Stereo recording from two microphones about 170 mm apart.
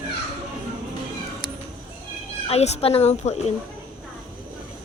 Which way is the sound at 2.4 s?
40° left (ahead or behind).